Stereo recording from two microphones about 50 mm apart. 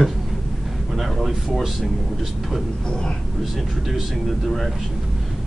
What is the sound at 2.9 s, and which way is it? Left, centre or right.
Speech, centre.